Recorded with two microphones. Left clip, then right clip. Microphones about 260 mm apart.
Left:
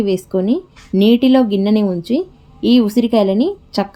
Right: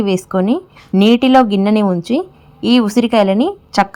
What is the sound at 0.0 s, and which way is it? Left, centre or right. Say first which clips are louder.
A woman's voice: right 1 dB; centre.